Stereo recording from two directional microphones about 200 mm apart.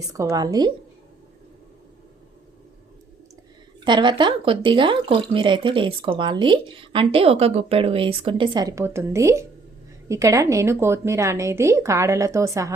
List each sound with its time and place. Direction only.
0.1 s speech: 20° right (ahead or behind)
3.8 s a woman's voice: 25° right (ahead or behind)